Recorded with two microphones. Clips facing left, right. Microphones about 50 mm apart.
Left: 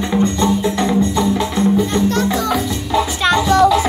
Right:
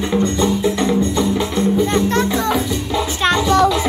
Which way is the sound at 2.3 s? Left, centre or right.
Right.